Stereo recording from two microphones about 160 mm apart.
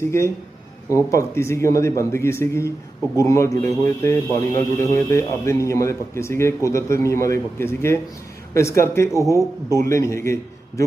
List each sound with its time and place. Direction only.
0.9 s a man's voice: 20° left (ahead or behind)